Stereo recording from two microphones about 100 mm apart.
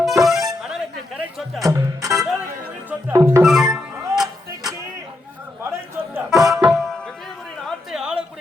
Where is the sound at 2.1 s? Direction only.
5° right (ahead or behind).